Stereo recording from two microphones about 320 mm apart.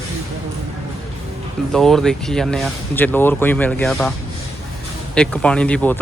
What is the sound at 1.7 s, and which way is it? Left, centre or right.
Speech, centre.